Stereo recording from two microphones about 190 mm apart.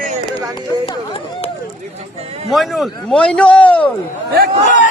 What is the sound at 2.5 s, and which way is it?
A man's voice, centre (ahead or behind).